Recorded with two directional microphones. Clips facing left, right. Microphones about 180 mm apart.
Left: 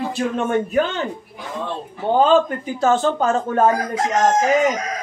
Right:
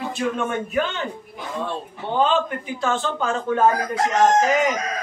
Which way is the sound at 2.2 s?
40° left (ahead or behind).